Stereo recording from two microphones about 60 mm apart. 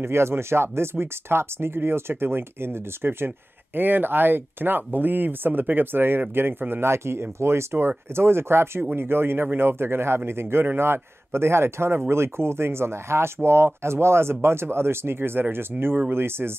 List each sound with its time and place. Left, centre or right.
0.0 s a man's voice: right